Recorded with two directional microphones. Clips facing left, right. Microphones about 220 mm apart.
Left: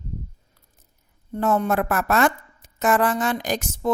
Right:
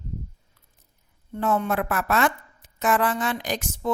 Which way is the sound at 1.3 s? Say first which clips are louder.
Left 3 dB; 45° left (ahead or behind).